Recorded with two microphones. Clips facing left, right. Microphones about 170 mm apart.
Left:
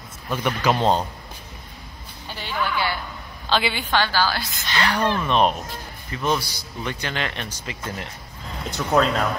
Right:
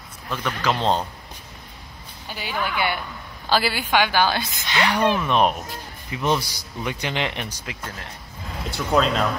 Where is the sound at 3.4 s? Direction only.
5° right (ahead or behind).